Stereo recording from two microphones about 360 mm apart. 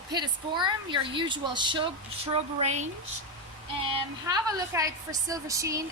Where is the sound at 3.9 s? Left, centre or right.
Centre.